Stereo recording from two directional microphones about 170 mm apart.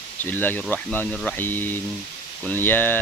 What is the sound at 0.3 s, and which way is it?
Speech, 10° left (ahead or behind).